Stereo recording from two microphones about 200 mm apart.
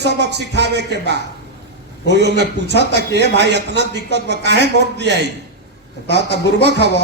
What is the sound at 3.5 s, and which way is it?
A woman's voice, 60° right (ahead or behind).